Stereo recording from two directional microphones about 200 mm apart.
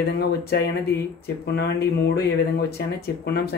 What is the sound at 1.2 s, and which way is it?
Speech, 55° left (ahead or behind).